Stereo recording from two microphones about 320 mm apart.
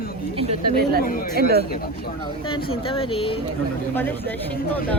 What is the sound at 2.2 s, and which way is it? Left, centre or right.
Speech, centre.